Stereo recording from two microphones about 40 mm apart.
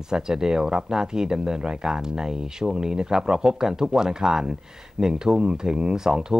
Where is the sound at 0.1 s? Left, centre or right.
Centre.